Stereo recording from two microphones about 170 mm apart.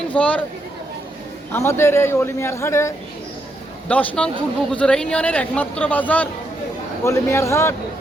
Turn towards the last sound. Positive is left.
turn(degrees=15)  # may be behind; listen again after turning